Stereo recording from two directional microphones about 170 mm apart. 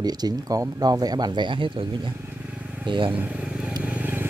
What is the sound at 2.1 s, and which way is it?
Vehicle, 10° right (ahead or behind).